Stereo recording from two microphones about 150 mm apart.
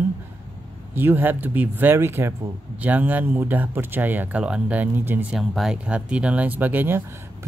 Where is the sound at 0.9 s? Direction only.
15° right (ahead or behind).